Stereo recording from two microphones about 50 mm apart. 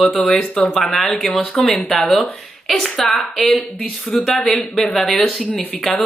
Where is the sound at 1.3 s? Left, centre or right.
Centre.